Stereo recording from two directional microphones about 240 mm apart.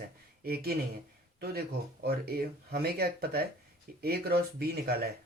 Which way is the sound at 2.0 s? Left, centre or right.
Right.